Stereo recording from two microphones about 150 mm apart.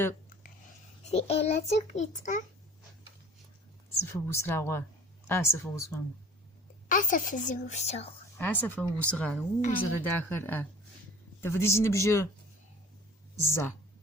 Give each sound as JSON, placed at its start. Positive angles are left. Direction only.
{"t": 1.0, "sound": "a child's voice", "side_deg": 45}
{"t": 3.9, "sound": "speech", "side_deg": 15}
{"t": 6.8, "sound": "a woman's voice", "side_deg": 60}
{"t": 8.4, "sound": "speech", "side_deg": 10}
{"t": 13.4, "sound": "speech", "side_deg": 15}